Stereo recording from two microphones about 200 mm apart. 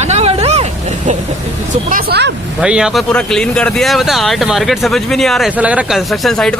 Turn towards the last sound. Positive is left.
turn(degrees=0)  # may be behind; listen again after turning